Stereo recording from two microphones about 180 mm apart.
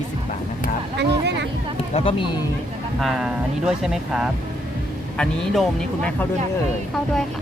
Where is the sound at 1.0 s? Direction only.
70° right (ahead or behind).